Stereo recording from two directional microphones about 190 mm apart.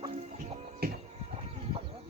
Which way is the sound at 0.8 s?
55° right (ahead or behind).